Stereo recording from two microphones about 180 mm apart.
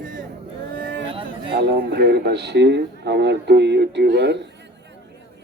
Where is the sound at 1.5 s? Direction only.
60° right (ahead or behind).